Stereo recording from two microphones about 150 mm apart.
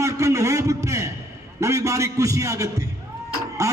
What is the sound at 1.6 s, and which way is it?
A man's voice, 20° right (ahead or behind).